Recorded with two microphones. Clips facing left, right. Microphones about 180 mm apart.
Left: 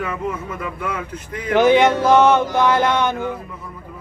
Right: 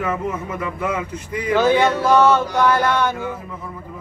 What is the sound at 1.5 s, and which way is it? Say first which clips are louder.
Male singing: left 3 dB; 20° left (ahead or behind).